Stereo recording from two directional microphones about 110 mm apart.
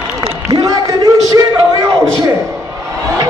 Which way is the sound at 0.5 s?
35° right (ahead or behind).